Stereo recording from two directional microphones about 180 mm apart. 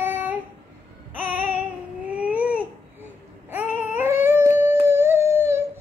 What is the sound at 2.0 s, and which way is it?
Baby cry, 10° right (ahead or behind).